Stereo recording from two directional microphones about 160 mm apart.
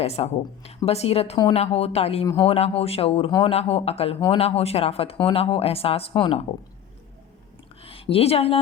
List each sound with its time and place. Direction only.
0.0 s speech: 40° left (ahead or behind)
2.2 s speech: 15° left (ahead or behind)
2.5 s speech: 40° left (ahead or behind)
7.8 s a sound: 35° left (ahead or behind)